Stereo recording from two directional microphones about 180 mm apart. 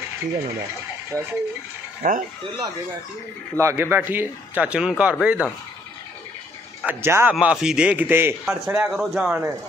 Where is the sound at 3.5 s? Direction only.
15° right (ahead or behind).